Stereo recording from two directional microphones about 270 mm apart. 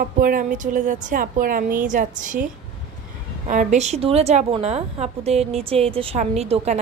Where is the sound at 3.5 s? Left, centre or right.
Right.